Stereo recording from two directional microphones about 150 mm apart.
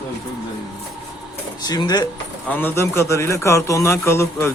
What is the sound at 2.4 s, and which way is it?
A man's voice, 10° left (ahead or behind).